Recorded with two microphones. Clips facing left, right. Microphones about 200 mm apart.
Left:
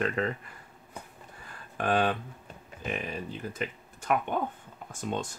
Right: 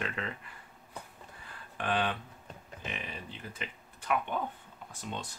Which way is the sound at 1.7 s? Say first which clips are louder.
Left 5 dB; 45° left (ahead or behind).